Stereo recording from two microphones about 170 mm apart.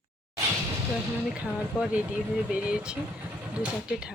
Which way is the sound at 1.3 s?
5° right (ahead or behind).